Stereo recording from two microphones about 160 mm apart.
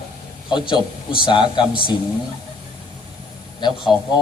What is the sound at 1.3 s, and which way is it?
Speech, 30° left (ahead or behind).